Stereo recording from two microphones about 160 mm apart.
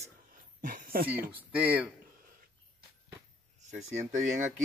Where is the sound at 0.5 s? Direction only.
60° right (ahead or behind).